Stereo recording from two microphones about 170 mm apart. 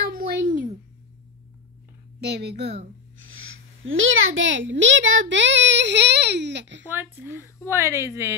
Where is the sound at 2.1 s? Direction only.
75° right (ahead or behind).